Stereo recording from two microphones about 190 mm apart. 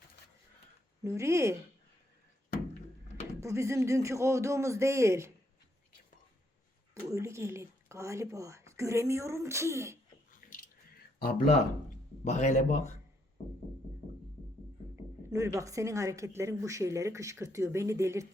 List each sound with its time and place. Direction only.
1.0 s speech: 15° right (ahead or behind)
3.4 s speech: 15° right (ahead or behind)
7.1 s speech: 15° right (ahead or behind)
10.3 s drip: 45° left (ahead or behind)
12.2 s speech: 40° left (ahead or behind)
15.3 s speech: 15° right (ahead or behind)